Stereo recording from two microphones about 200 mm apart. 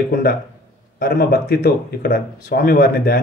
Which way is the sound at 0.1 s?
45° left (ahead or behind).